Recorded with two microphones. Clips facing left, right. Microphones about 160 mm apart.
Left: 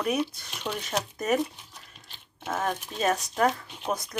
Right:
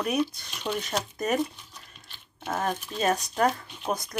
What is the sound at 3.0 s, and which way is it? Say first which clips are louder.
Speech: even; centre (ahead or behind).